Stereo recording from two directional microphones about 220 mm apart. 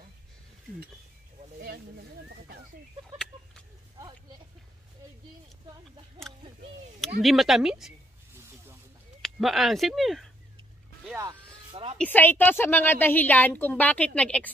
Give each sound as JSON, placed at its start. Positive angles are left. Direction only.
{"t": 2.2, "sound": "speech", "side_deg": -45}
{"t": 7.2, "sound": "speech", "side_deg": 0}
{"t": 9.2, "sound": "speech", "side_deg": 0}
{"t": 11.1, "sound": "vehicle", "side_deg": -20}
{"t": 12.0, "sound": "a woman's voice", "side_deg": 10}